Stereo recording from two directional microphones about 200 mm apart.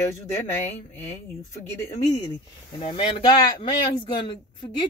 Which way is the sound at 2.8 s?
25° left (ahead or behind).